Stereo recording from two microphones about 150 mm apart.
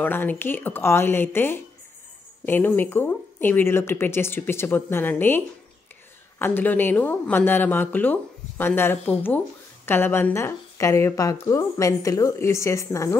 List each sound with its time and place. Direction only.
0.0 s speech: 15° left (ahead or behind)
6.4 s a woman's voice: 10° left (ahead or behind)